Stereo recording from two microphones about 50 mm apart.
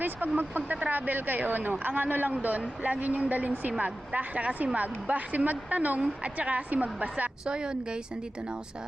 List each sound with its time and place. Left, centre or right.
0.0 s speech: right
2.3 s speech: right
7.4 s speech: centre